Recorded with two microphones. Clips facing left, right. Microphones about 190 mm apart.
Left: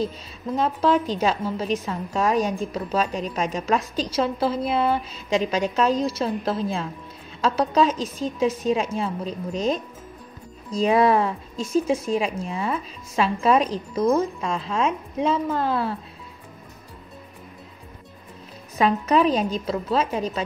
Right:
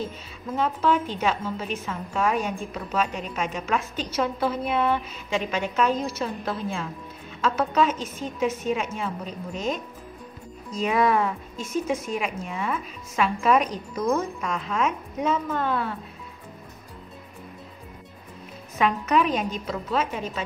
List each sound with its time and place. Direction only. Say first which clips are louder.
0.6 s a woman's voice: left 2 dB; 35° left (ahead or behind)
18.8 s a woman's voice: left 3 dB; 35° left (ahead or behind)